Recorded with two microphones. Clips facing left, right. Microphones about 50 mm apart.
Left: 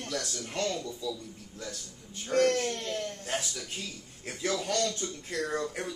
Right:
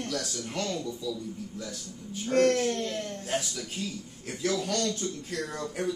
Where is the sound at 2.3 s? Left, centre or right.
Right.